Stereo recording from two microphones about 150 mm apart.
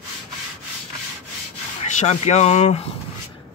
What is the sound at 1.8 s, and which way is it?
Speech, 45° left (ahead or behind).